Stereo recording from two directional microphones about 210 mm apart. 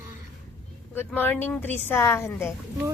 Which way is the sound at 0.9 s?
10° left (ahead or behind).